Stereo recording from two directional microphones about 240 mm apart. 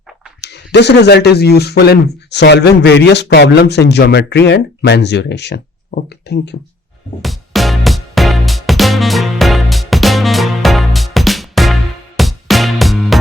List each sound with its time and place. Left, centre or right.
0.4 s speech: left
7.2 s music: centre